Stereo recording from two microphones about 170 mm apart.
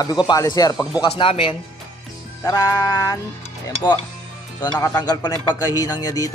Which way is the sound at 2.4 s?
20° left (ahead or behind).